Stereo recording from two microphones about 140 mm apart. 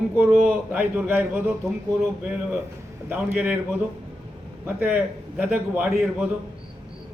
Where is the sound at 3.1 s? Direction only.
10° right (ahead or behind).